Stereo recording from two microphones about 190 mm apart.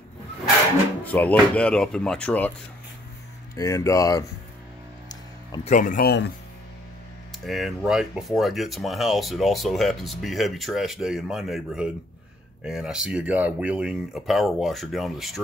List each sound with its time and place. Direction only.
1.0 s speech: 10° left (ahead or behind)
3.5 s speech: 15° left (ahead or behind)
5.6 s speech: 40° left (ahead or behind)
7.4 s speech: centre (ahead or behind)